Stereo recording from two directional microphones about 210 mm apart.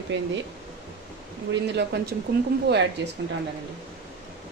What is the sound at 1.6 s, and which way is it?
A woman's voice, 55° right (ahead or behind).